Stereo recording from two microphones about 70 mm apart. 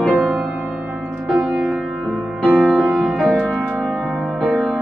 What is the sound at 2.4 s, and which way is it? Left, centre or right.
Music, right.